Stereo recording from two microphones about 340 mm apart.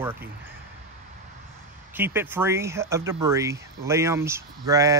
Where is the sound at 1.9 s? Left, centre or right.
Centre.